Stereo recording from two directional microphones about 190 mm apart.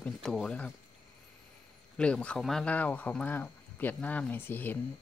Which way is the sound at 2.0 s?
5° left (ahead or behind).